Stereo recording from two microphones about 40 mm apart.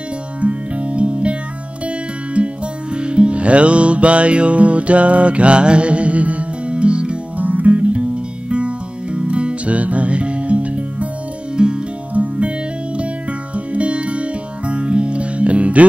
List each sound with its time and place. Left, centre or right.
0.4 s music: right
2.3 s music: right
7.4 s music: right
11.5 s music: right
12.1 s music: right